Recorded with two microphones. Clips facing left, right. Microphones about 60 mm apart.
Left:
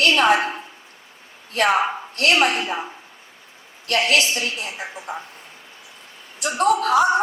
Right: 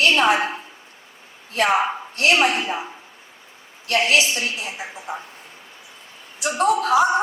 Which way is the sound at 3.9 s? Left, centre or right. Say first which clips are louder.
Right 1 dB; left.